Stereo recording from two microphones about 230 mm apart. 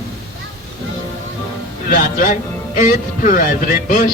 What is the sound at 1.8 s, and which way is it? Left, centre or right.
Music, left.